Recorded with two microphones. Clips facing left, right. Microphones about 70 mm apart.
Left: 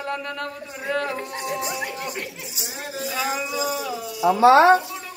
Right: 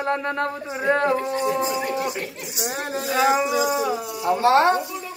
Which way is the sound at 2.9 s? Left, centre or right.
Right.